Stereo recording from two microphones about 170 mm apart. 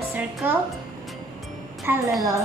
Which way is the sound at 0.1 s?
10° right (ahead or behind).